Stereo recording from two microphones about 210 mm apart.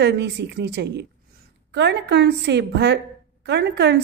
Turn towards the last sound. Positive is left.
turn(degrees=-55)  # may be behind; listen again after turning